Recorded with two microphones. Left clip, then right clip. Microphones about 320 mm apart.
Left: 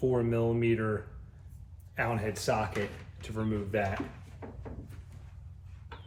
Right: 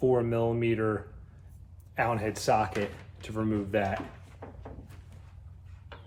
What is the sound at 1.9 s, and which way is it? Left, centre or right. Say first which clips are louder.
Speech: right 3 dB; centre.